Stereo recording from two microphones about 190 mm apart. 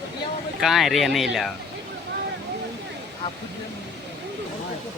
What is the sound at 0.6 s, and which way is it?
Speech, centre (ahead or behind).